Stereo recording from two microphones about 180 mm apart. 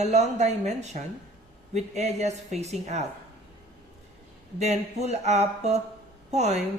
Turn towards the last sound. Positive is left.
turn(degrees=-40)  # may be behind; listen again after turning